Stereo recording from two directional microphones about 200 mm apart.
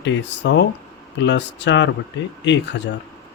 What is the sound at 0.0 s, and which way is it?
Speech, 65° left (ahead or behind).